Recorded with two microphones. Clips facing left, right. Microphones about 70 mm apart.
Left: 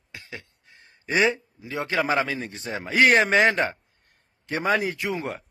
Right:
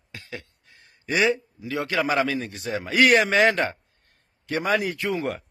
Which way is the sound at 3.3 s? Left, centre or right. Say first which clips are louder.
Even; left.